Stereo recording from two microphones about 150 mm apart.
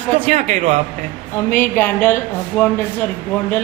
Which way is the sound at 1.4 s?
15° left (ahead or behind).